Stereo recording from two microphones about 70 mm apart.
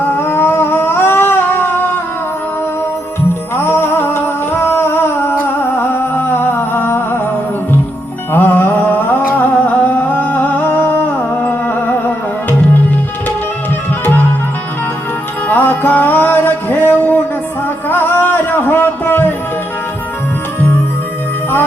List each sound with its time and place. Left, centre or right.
0.2 s a sound: left
3.5 s music: left
8.3 s music: left
14.0 s music: left
15.4 s music: left
17.8 s a sound: left